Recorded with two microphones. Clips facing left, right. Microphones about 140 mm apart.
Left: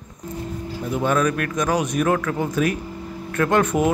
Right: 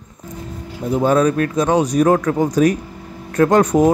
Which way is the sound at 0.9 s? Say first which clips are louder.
Right 6 dB; 35° right (ahead or behind).